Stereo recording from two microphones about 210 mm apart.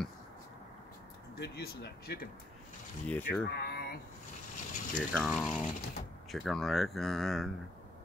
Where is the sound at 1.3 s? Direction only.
50° left (ahead or behind).